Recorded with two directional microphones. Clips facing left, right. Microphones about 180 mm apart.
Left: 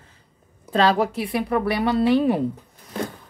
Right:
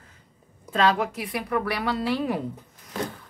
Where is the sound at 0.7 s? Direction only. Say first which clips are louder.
Left 4 dB; 35° left (ahead or behind).